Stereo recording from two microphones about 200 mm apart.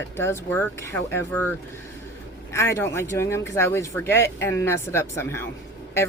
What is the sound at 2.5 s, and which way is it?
Speech, 10° left (ahead or behind).